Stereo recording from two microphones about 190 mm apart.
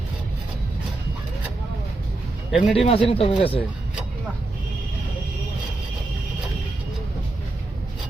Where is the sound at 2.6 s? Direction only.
30° left (ahead or behind).